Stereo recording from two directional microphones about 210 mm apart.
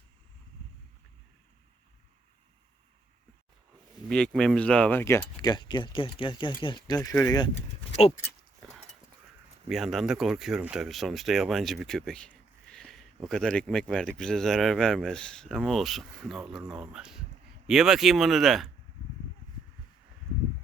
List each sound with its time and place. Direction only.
4.1 s speech: 5° left (ahead or behind); by 7.5 s 20° left (ahead or behind)
8.6 s horse: 5° left (ahead or behind)
9.6 s speech: centre (ahead or behind)